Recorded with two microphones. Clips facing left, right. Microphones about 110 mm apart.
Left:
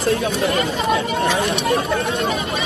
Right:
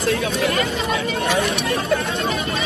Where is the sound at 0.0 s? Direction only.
30° left (ahead or behind).